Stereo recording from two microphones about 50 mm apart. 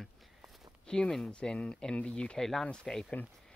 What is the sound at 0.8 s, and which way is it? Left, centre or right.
Speech, centre.